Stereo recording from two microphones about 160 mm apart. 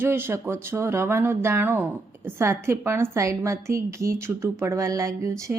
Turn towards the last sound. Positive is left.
turn(degrees=-20)  # may be behind; listen again after turning